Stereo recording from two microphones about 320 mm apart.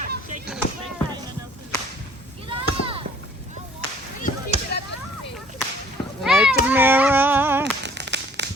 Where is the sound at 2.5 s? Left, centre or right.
Centre.